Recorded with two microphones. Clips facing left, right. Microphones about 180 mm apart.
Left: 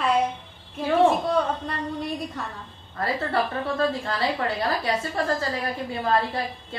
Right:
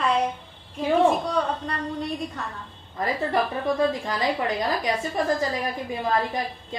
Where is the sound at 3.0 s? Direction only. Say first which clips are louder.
Right 1 dB; 15° right (ahead or behind).